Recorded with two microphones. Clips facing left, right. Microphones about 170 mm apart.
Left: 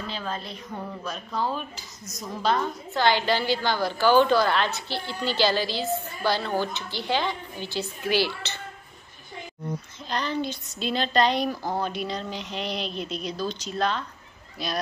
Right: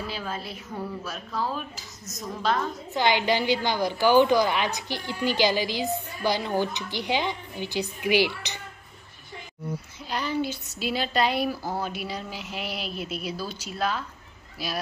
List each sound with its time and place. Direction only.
0.0 s a woman's voice: 10° right (ahead or behind)
2.9 s a woman's voice: 20° right (ahead or behind)
10.0 s a woman's voice: 10° right (ahead or behind)